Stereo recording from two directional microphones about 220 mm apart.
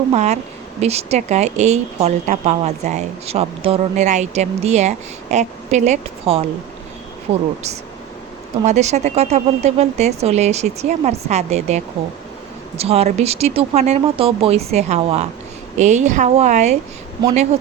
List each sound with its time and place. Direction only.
0.1 s a woman's voice: 30° right (ahead or behind)
8.6 s a woman's voice: 30° right (ahead or behind)